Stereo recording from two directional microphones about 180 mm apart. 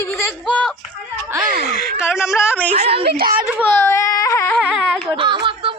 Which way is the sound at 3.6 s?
10° left (ahead or behind).